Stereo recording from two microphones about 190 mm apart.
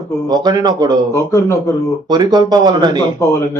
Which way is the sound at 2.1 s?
20° right (ahead or behind).